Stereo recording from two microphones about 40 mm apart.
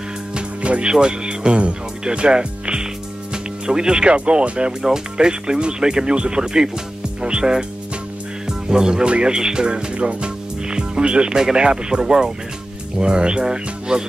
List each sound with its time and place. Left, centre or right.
0.6 s speech: right
0.9 s speech: right
9.9 s speech: right
10.7 s speech: right